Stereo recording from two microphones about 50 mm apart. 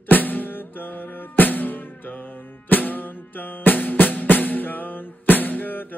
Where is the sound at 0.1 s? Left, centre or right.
Left.